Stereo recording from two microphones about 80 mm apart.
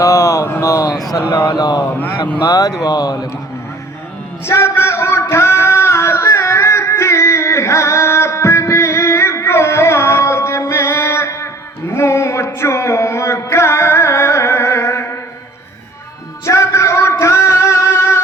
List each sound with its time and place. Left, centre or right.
0.0 s speech: left
1.5 s a man's voice: left
4.4 s a sound: left
11.9 s music: left
16.5 s music: left